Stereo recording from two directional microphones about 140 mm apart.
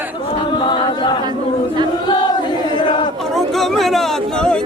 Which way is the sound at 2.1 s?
30° left (ahead or behind).